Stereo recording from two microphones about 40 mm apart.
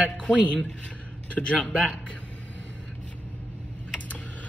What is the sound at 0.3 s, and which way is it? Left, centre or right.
Speech, left.